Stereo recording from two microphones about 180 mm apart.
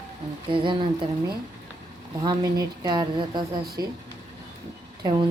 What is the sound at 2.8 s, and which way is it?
A woman's voice, 25° right (ahead or behind).